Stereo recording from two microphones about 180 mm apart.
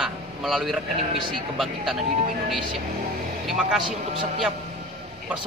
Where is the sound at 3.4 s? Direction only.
5° right (ahead or behind).